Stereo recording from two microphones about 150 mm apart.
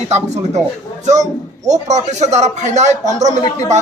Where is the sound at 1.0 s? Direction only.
50° right (ahead or behind).